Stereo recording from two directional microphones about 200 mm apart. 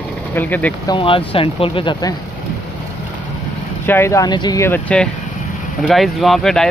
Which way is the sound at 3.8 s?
10° left (ahead or behind).